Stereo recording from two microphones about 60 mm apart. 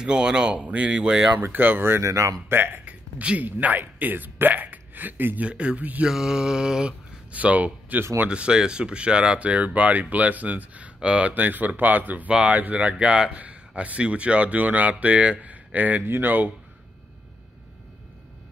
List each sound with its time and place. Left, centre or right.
0.0 s speech: centre
1.4 s speech: right
2.0 s speech: right
2.5 s speech: right
2.8 s speech: right
5.5 s speech: centre
6.0 s speech: centre
7.3 s speech: right
11.3 s speech: right